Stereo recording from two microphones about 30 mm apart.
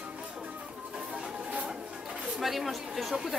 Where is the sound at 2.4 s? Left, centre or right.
Centre.